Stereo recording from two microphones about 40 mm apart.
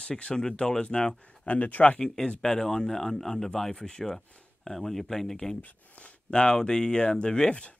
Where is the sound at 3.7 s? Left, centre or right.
Centre.